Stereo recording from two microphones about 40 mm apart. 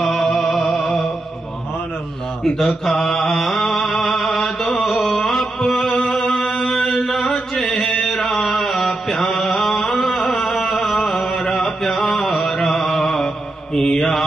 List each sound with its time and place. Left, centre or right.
0.0 s music: centre
2.4 s mantra: centre
6.0 s chant: centre
12.6 s a sound: centre
13.7 s mantra: centre